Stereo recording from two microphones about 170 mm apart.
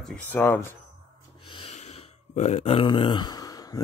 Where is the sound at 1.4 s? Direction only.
30° left (ahead or behind).